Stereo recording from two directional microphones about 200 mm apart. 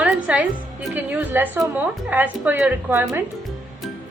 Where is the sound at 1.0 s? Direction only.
10° right (ahead or behind).